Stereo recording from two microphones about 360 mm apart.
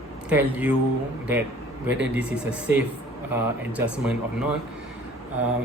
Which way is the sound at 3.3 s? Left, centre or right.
Centre.